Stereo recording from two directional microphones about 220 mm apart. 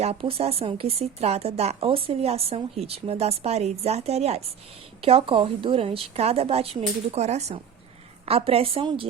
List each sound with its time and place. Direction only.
0.0 s speech: 25° right (ahead or behind)